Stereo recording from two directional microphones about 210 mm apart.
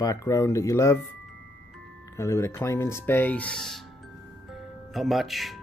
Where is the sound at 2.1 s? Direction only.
15° left (ahead or behind).